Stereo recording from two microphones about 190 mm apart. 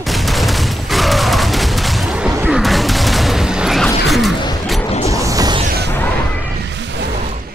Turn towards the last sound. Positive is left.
turn(degrees=-20)  # may be behind; listen again after turning